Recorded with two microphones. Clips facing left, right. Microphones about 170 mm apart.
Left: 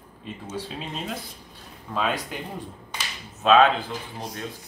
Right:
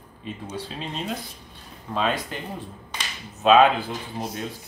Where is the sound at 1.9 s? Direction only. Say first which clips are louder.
Right 1 dB; 10° left (ahead or behind).